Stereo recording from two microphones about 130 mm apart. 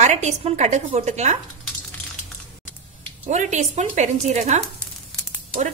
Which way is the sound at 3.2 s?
70° right (ahead or behind).